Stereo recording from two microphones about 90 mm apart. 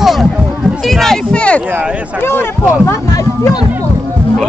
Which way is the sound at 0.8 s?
5° left (ahead or behind).